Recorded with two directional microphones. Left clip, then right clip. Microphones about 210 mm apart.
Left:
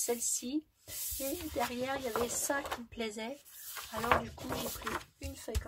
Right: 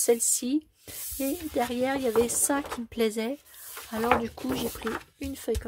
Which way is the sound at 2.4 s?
50° right (ahead or behind).